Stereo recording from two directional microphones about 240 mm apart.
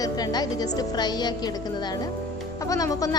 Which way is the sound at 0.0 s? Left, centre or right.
Centre.